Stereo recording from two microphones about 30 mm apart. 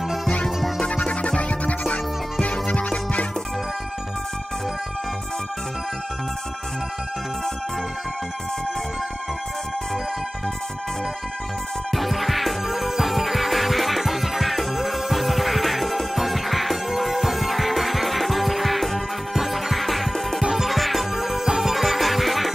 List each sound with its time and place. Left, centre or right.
1.0 s music: left
1.5 s music: left
11.9 s music: centre